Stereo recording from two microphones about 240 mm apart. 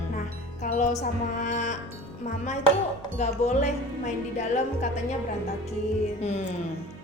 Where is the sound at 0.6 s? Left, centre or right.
Left.